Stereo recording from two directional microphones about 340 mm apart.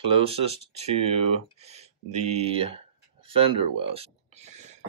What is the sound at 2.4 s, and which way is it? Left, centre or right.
Speech, centre.